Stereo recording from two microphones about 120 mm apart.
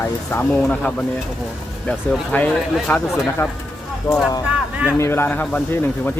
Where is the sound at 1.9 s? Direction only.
15° left (ahead or behind).